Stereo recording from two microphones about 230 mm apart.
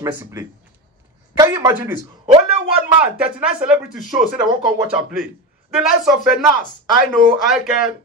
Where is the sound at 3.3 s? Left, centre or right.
Centre.